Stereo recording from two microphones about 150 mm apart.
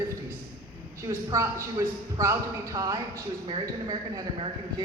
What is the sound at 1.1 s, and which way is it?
Speech, 20° right (ahead or behind).